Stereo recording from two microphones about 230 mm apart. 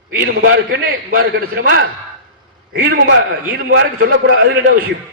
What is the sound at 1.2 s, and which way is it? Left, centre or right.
Speech, right.